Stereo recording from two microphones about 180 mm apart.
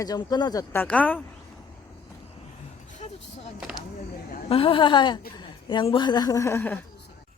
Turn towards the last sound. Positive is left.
turn(degrees=10)  # may be behind; listen again after turning